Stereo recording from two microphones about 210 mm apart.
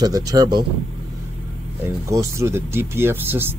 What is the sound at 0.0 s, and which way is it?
Speech, 20° right (ahead or behind).